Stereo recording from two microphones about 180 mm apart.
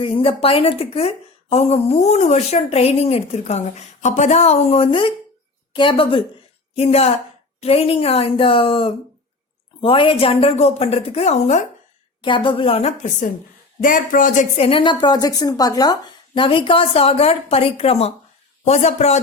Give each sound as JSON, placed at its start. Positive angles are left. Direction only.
{"t": 0.0, "sound": "a woman's voice", "side_deg": 30}
{"t": 12.2, "sound": "a woman's voice", "side_deg": 25}
{"t": 14.5, "sound": "a woman's voice", "side_deg": 30}